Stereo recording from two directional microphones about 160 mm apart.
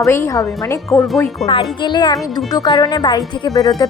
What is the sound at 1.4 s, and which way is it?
A woman's voice, 25° left (ahead or behind).